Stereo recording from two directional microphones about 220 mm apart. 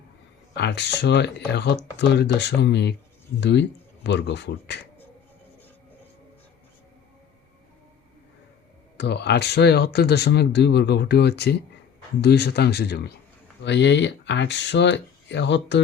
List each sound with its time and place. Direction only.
0.5 s speech: 50° left (ahead or behind)
9.0 s speech: 50° left (ahead or behind)